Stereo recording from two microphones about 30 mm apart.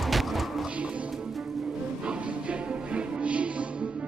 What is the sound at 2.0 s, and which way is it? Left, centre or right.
Music, right.